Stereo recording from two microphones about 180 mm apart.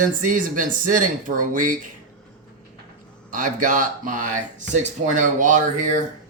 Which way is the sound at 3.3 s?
45° right (ahead or behind).